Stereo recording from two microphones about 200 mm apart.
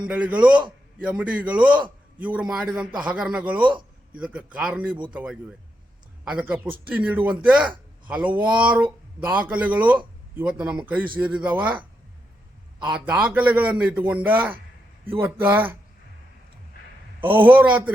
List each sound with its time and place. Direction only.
0.0 s a man's voice: 5° right (ahead or behind)
3.6 s a man's voice: 25° right (ahead or behind)
4.1 s a man's voice: 5° right (ahead or behind)
12.9 s a man's voice: 5° right (ahead or behind)
17.6 s a man's voice: 10° right (ahead or behind)